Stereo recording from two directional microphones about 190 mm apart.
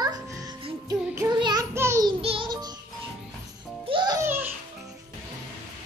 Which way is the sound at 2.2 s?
30° right (ahead or behind).